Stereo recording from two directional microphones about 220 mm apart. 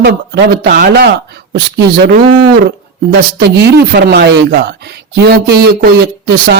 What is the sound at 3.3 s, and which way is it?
A man's voice, 50° right (ahead or behind).